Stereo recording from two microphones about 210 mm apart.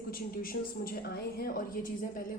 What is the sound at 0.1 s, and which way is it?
A woman's voice, 45° left (ahead or behind).